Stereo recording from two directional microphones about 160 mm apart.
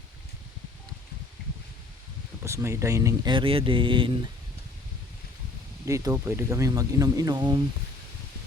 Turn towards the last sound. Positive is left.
turn(degrees=-25)  # may be behind; listen again after turning